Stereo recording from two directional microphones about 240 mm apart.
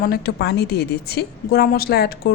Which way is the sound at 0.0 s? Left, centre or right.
Left.